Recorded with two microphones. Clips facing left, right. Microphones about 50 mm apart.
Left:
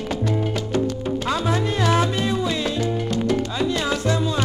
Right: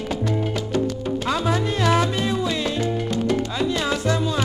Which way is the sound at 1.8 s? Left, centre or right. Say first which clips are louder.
Even; centre.